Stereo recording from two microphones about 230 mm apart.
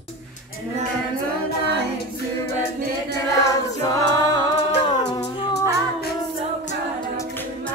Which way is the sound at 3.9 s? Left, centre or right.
Centre.